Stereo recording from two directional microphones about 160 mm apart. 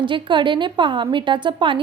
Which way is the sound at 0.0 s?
30° right (ahead or behind).